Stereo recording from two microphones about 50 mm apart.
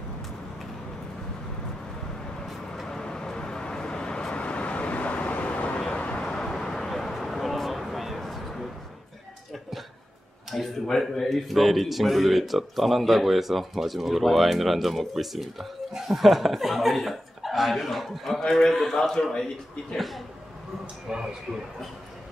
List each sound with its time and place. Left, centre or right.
2.4 s vehicle: centre; by 6.2 s left
6.2 s a sound: centre
10.5 s a man's voice: centre
21.1 s speech: centre